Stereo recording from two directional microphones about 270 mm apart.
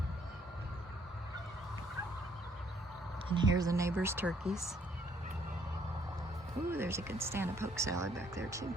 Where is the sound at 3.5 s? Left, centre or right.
Centre.